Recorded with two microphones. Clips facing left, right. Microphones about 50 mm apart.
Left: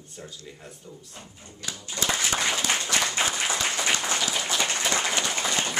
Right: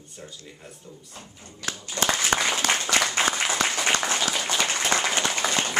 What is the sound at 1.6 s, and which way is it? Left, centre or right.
Speech, right.